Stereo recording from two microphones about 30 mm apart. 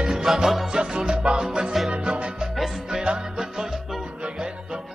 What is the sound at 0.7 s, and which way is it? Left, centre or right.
Music, right.